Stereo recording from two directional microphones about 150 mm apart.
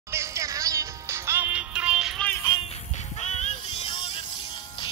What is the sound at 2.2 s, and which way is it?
Music, 15° left (ahead or behind).